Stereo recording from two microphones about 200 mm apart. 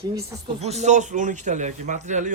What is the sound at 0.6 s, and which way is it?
A man's voice, 35° right (ahead or behind).